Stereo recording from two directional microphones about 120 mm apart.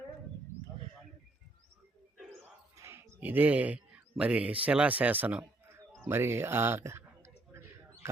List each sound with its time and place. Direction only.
2.7 s a sound: 20° right (ahead or behind)
4.2 s speech: 10° right (ahead or behind)
8.0 s speech: 20° right (ahead or behind)